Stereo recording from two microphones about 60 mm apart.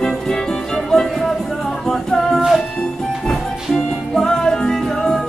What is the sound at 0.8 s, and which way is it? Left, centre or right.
Music, centre.